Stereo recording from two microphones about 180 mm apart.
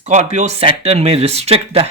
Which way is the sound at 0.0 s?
40° right (ahead or behind).